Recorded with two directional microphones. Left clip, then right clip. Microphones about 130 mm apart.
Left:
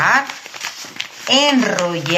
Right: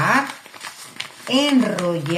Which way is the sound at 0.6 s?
20° left (ahead or behind).